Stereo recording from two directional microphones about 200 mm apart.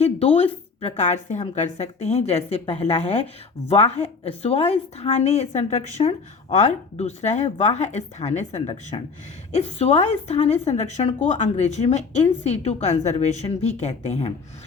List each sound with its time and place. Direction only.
0.0 s a woman's voice: 30° left (ahead or behind)